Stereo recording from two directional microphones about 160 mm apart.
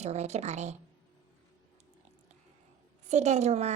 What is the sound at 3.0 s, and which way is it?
Speech, 45° right (ahead or behind).